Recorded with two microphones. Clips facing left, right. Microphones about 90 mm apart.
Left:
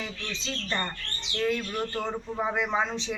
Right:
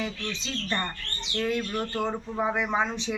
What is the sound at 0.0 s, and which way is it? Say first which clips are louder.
Speech: right 3 dB; 10° right (ahead or behind).